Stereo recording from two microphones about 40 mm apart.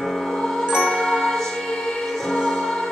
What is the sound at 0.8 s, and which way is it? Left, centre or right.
Ding, centre.